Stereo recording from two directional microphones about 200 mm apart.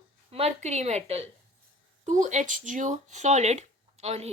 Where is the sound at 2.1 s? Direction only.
35° right (ahead or behind).